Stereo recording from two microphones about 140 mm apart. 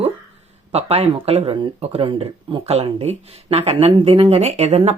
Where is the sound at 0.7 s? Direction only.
45° right (ahead or behind).